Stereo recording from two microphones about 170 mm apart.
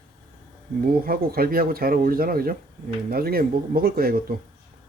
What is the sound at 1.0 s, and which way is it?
Speech, 60° right (ahead or behind).